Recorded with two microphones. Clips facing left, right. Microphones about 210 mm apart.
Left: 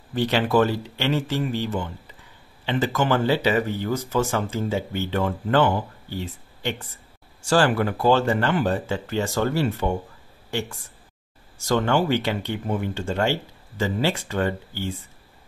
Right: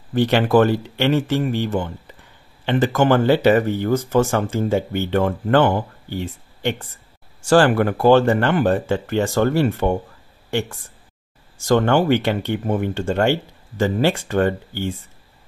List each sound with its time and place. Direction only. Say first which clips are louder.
0.1 s speech: right 5 dB; 55° right (ahead or behind)
11.6 s speech: right 5 dB; 55° right (ahead or behind)